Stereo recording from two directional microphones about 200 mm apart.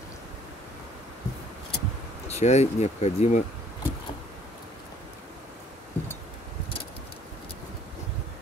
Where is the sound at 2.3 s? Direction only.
35° left (ahead or behind).